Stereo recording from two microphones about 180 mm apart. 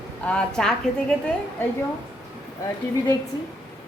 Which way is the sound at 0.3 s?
5° left (ahead or behind).